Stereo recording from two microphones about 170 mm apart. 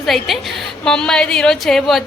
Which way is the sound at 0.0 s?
Centre (ahead or behind).